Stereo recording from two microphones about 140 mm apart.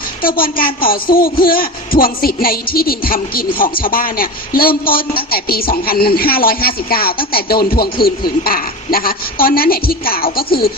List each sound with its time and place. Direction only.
0.2 s a man's voice: 90° left